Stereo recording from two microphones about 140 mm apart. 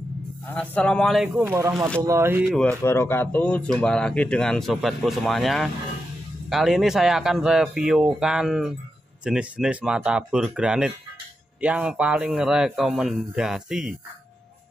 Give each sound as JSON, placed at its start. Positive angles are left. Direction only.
{"t": 0.5, "sound": "speech", "side_deg": 10}
{"t": 1.4, "sound": "speech", "side_deg": -15}
{"t": 2.8, "sound": "speech", "side_deg": 20}